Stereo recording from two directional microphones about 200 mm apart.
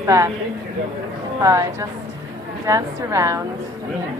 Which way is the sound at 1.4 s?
15° right (ahead or behind).